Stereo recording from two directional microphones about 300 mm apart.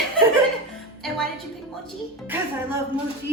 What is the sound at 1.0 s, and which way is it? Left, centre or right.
A woman's voice, centre.